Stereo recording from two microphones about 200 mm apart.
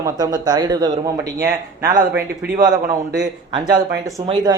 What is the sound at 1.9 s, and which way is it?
Speech, 50° right (ahead or behind).